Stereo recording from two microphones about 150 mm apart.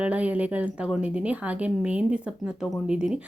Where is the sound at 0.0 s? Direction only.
10° right (ahead or behind).